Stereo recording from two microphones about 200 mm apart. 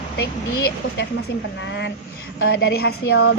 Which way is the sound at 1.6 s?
65° left (ahead or behind).